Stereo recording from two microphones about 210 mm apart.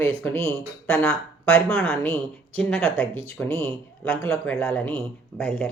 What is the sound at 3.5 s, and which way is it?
Speech, 25° right (ahead or behind).